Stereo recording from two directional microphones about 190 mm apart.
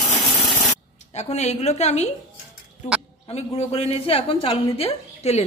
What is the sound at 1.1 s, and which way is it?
Speech, 35° left (ahead or behind).